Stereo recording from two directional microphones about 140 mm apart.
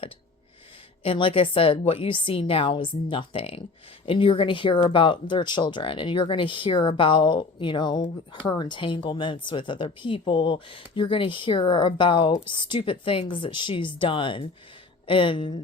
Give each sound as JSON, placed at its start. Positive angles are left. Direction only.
{"t": 1.0, "sound": "speech", "side_deg": 40}